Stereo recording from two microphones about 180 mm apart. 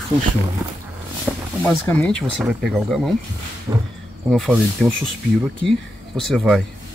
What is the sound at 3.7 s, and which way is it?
Speech, 15° right (ahead or behind).